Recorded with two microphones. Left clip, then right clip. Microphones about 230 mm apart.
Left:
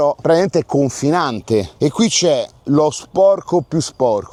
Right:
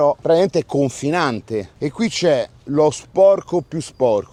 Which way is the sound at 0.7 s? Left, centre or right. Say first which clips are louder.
Left 3 dB; left.